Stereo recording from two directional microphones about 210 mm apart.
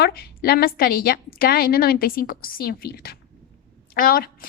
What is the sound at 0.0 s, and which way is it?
A woman's voice, 50° left (ahead or behind).